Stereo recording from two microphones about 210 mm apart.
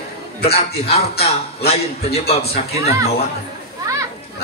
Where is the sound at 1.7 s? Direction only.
30° left (ahead or behind).